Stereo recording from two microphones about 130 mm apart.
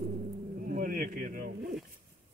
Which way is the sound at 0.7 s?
90° right.